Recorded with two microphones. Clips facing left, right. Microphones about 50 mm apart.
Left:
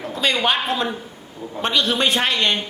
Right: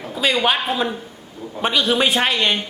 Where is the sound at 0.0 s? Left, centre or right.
Centre.